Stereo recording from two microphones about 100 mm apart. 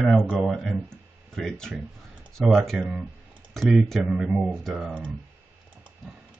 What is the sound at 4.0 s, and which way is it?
Speech, 10° right (ahead or behind).